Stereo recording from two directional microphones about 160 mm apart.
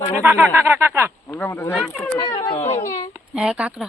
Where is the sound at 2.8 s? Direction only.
55° left (ahead or behind).